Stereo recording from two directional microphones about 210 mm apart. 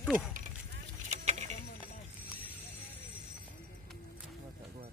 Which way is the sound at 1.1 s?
35° right (ahead or behind).